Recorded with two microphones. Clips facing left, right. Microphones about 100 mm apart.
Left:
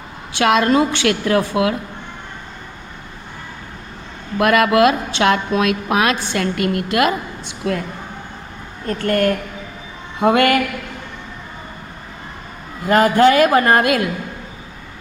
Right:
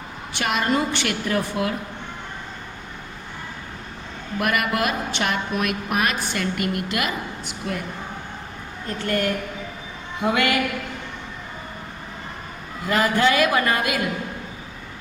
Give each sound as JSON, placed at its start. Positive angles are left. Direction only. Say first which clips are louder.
{"t": 0.3, "sound": "a woman's voice", "louder": "left 8 dB", "side_deg": 70}
{"t": 4.4, "sound": "a woman's voice", "louder": "left 9 dB", "side_deg": 80}
{"t": 6.3, "sound": "a woman's voice", "louder": "left 6 dB", "side_deg": 60}
{"t": 7.6, "sound": "speech", "louder": "left 8 dB", "side_deg": 90}
{"t": 8.9, "sound": "a woman's voice", "louder": "left 7 dB", "side_deg": 50}
{"t": 12.8, "sound": "a woman's voice", "louder": "left 7 dB", "side_deg": 50}